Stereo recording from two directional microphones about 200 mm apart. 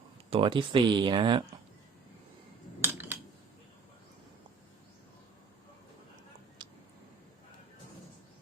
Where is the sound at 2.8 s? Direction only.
10° right (ahead or behind).